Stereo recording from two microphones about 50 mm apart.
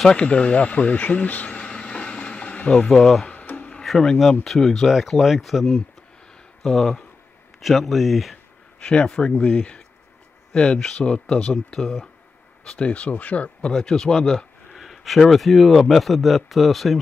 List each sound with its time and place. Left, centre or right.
0.1 s a sound: centre
2.9 s speech: centre
3.3 s a sound: left
3.8 s speech: centre
8.7 s speech: centre
10.5 s speech: centre
13.7 s speech: centre